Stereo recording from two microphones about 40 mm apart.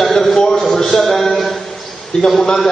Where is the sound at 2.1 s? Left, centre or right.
Centre.